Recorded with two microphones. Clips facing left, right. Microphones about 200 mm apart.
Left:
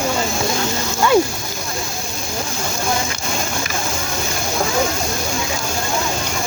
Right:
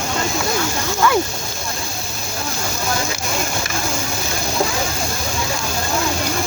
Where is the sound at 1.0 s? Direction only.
25° left (ahead or behind).